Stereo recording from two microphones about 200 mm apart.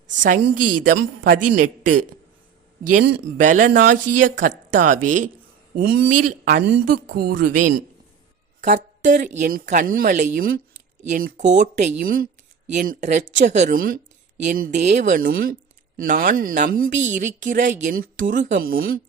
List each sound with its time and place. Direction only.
0.8 s a woman's voice: 45° right (ahead or behind)
3.4 s a woman's voice: 40° right (ahead or behind)
5.7 s a woman's voice: 50° right (ahead or behind)